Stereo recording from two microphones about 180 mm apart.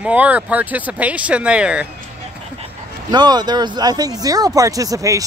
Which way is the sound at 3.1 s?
25° right (ahead or behind).